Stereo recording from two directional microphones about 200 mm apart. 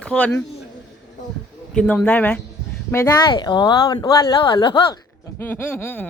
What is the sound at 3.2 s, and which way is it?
Speech, 25° left (ahead or behind).